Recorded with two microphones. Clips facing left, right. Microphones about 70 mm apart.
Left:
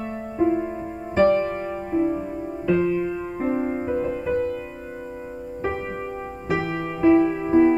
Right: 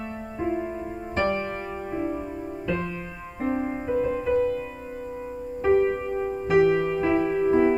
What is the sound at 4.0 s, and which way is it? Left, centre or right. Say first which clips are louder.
Music: right 1 dB; centre.